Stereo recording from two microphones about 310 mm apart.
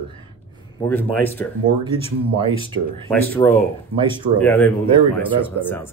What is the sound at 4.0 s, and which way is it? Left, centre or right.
Speech, centre.